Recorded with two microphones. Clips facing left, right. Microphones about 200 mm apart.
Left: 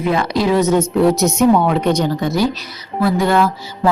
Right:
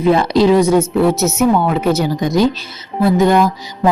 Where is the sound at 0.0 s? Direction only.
30° right (ahead or behind).